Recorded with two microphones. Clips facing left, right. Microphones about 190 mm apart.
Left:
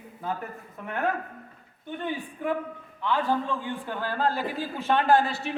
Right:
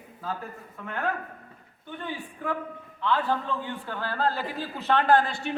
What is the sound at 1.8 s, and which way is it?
A man's voice, 20° left (ahead or behind).